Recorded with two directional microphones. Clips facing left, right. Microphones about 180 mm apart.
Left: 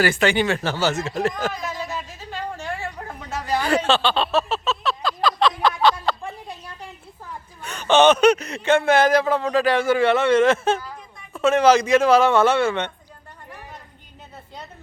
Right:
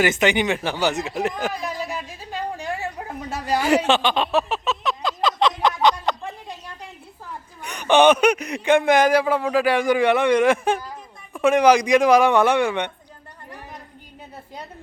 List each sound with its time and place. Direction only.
0.0 s speech: 20° right (ahead or behind)
1.4 s a sound: 15° right (ahead or behind)
7.6 s speech: 15° right (ahead or behind)